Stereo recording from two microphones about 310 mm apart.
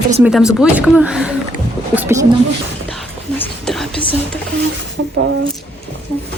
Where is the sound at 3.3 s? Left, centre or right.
Centre.